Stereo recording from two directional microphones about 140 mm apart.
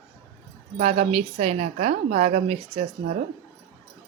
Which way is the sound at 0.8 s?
50° right (ahead or behind).